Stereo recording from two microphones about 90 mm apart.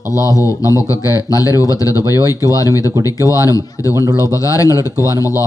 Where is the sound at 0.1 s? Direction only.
40° left (ahead or behind).